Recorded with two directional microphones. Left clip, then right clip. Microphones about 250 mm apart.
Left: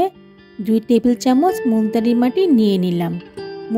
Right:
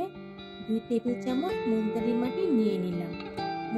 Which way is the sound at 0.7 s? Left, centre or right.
Left.